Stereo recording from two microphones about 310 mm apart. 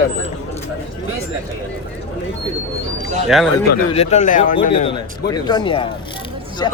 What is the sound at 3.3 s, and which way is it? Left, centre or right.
Speech, centre.